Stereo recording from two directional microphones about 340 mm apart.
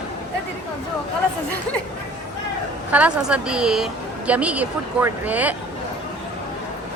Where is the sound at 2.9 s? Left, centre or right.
Centre.